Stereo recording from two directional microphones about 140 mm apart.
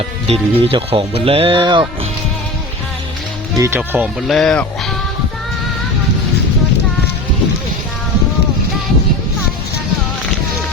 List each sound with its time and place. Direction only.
0.3 s speech: 45° right (ahead or behind)
3.6 s speech: 15° right (ahead or behind)
4.3 s speech: 5° left (ahead or behind)